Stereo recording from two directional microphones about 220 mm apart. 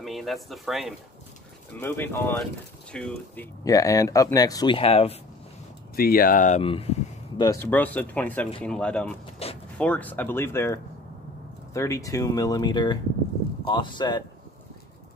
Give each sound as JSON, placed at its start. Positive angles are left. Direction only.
{"t": 0.0, "sound": "speech", "side_deg": 0}
{"t": 1.8, "sound": "speech", "side_deg": 10}
{"t": 3.6, "sound": "speech", "side_deg": 15}
{"t": 5.9, "sound": "speech", "side_deg": 40}
{"t": 7.6, "sound": "speech", "side_deg": 10}
{"t": 9.4, "sound": "vehicle", "side_deg": 25}
{"t": 9.8, "sound": "speech", "side_deg": 5}